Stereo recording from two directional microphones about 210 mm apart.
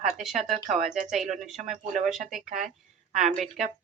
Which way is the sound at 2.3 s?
Centre (ahead or behind).